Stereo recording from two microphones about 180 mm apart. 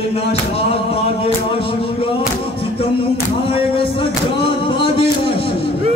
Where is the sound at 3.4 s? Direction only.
30° left (ahead or behind).